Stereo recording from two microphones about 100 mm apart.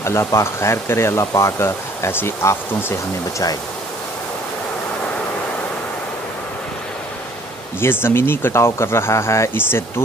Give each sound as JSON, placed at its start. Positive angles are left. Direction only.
{"t": 0.0, "sound": "speech", "side_deg": 30}
{"t": 7.8, "sound": "speech", "side_deg": 25}